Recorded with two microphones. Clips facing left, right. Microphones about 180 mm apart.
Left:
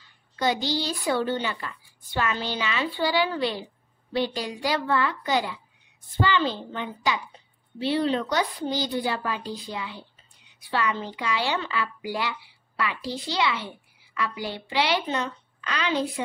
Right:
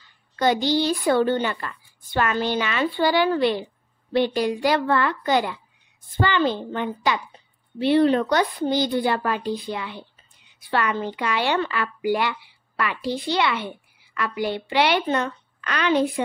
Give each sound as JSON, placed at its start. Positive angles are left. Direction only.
{"t": 0.4, "sound": "a woman's voice", "side_deg": -55}